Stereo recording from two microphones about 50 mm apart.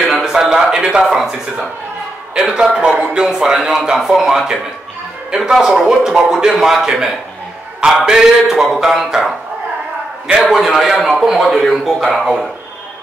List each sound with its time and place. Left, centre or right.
0.2 s a sound: centre
1.0 s a man's voice: centre
10.2 s a man's voice: right
10.5 s a man's voice: centre